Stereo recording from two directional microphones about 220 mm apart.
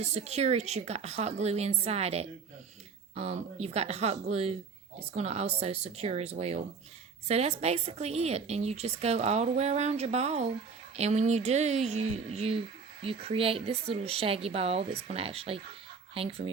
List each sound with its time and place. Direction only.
0.0 s speech: 30° right (ahead or behind)